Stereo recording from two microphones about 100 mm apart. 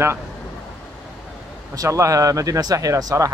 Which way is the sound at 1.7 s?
30° right (ahead or behind).